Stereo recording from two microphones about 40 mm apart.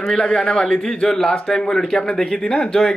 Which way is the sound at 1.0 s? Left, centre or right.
Centre.